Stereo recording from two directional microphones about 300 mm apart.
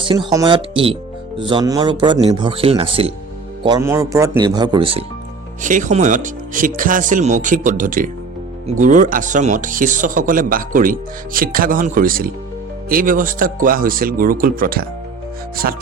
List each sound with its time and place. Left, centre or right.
0.0 s a man's voice: centre